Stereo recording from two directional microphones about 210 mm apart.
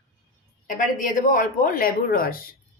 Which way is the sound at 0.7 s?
40° left (ahead or behind).